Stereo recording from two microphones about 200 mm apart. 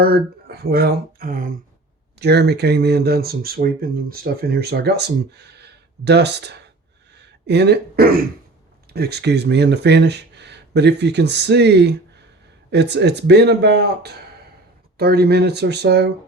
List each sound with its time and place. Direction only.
0.0 s speech: 50° right (ahead or behind)
2.1 s speech: 55° right (ahead or behind)